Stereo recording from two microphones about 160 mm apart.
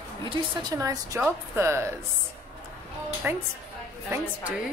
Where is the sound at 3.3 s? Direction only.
10° right (ahead or behind).